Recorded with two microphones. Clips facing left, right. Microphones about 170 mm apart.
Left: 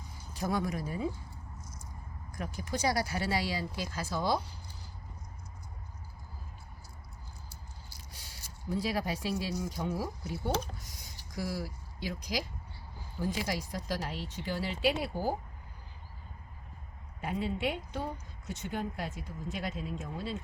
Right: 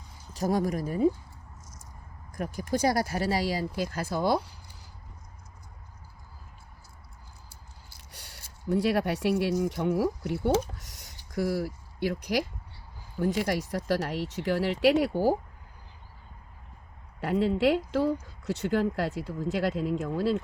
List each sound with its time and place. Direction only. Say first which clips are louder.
0.3 s speech: right 6 dB; 40° right (ahead or behind)
2.3 s speech: right 7 dB; 50° right (ahead or behind)
8.1 s speech: right 4 dB; 70° right (ahead or behind)
11.3 s speech: right 8 dB; 60° right (ahead or behind)
17.2 s speech: right 9 dB; 75° right (ahead or behind)